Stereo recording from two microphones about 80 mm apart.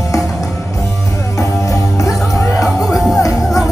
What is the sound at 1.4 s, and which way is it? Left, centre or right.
Music, left.